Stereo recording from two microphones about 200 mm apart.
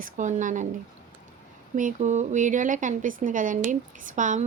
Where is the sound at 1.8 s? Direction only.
40° right (ahead or behind).